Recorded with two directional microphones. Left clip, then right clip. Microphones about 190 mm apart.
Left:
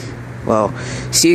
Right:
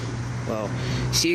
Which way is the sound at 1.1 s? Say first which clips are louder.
Left 10 dB; 45° left (ahead or behind).